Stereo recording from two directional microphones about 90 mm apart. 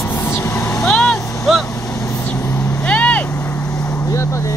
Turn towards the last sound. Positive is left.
turn(degrees=15)  # may be behind; listen again after turning